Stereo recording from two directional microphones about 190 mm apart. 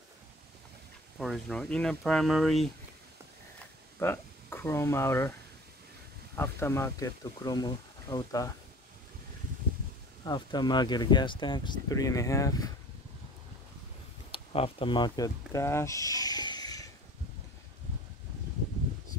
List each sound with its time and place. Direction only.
1.1 s speech: centre (ahead or behind)
4.0 s speech: 10° left (ahead or behind)
6.3 s speech: 10° left (ahead or behind)
10.2 s speech: 25° left (ahead or behind)
14.3 s speech: 30° left (ahead or behind)